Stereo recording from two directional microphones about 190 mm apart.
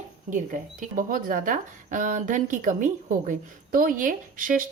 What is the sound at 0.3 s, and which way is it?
Speech, 40° right (ahead or behind).